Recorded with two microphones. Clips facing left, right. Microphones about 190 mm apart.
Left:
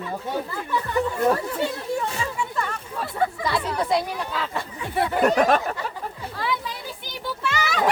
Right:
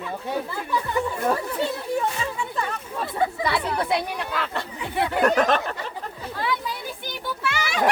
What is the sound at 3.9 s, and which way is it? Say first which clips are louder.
Speech: left 1 dB; 65° right (ahead or behind).